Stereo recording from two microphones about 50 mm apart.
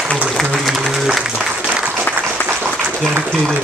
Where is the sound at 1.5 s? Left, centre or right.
Right.